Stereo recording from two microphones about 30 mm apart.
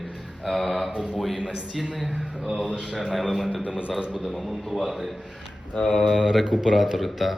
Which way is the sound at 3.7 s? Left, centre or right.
Right.